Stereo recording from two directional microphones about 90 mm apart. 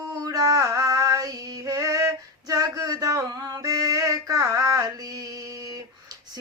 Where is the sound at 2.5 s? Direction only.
40° right (ahead or behind).